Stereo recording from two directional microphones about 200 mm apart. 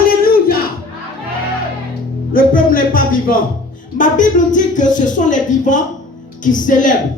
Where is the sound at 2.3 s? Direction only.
45° left (ahead or behind).